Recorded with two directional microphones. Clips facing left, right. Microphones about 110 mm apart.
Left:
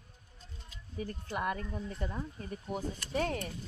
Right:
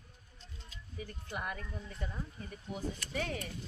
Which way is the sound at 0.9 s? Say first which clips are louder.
Left 5 dB; 40° left (ahead or behind).